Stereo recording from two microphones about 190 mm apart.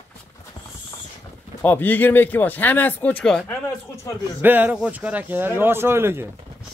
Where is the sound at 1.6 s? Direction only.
10° left (ahead or behind).